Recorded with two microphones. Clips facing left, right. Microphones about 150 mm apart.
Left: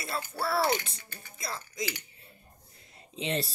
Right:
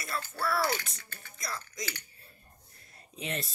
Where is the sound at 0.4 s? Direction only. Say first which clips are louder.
Left 3 dB; 25° left (ahead or behind).